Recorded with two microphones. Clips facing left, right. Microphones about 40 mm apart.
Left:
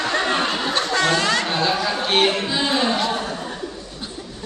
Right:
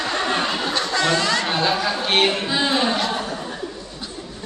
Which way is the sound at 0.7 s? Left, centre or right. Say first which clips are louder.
Left 1 dB; left.